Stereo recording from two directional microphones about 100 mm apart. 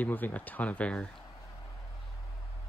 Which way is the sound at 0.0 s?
15° left (ahead or behind).